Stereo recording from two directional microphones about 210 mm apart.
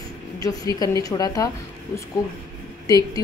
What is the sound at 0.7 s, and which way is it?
Speech, 15° left (ahead or behind).